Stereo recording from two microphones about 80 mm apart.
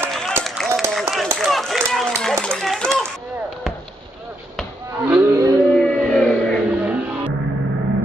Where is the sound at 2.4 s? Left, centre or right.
Centre.